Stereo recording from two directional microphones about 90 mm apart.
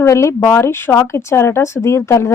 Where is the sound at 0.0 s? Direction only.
30° left (ahead or behind).